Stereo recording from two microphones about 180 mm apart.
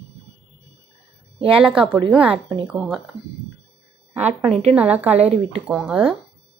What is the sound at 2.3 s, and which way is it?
Speech, 30° right (ahead or behind).